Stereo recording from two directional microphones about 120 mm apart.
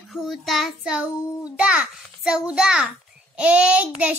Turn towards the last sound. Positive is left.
turn(degrees=-10)  # may be behind; listen again after turning